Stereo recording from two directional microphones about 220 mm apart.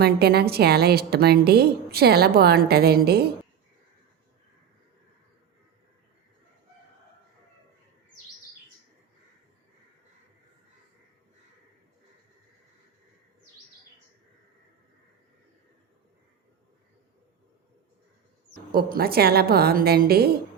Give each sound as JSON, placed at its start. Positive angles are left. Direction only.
{"t": 0.0, "sound": "a woman's voice", "side_deg": -45}
{"t": 18.7, "sound": "a woman's voice", "side_deg": -45}